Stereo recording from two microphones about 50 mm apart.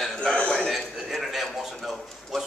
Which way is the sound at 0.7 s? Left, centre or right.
Centre.